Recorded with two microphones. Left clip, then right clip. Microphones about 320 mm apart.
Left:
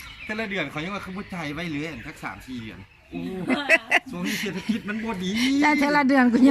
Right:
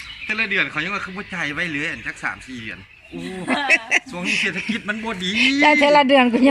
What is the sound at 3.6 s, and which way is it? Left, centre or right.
Speech, centre.